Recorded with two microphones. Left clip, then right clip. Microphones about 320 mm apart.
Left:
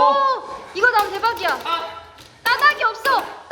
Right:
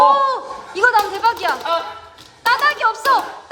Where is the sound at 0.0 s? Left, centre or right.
Centre.